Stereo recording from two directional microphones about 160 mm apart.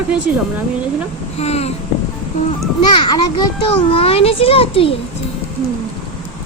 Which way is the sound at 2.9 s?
25° left (ahead or behind).